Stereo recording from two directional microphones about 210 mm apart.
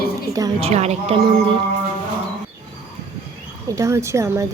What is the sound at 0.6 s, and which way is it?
Speech, 30° right (ahead or behind).